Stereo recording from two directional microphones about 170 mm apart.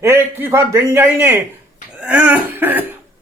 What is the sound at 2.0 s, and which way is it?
Throat clearing, 10° right (ahead or behind).